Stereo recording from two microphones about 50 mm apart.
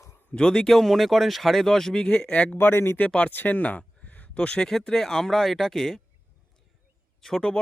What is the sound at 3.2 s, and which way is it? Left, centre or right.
Speech, left.